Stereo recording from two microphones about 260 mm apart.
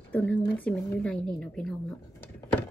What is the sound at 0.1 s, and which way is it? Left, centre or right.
A woman's voice, centre.